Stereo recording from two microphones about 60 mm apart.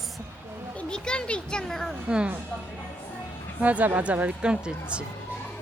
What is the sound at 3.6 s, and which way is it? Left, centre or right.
A woman's voice, right.